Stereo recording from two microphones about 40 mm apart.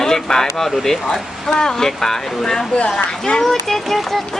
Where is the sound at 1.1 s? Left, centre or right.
Centre.